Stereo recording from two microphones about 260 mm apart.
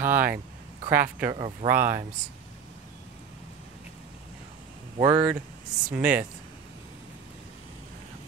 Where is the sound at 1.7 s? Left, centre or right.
Centre.